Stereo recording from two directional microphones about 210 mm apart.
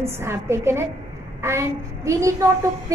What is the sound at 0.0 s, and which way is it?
A woman's voice, 10° right (ahead or behind).